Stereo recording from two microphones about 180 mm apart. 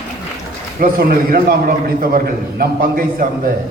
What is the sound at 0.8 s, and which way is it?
A man's voice, 55° right (ahead or behind).